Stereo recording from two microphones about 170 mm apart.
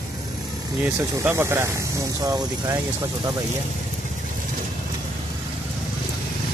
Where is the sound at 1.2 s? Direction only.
15° right (ahead or behind).